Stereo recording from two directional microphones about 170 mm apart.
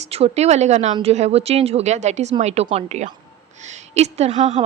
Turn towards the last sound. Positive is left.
turn(degrees=-40)  # may be behind; listen again after turning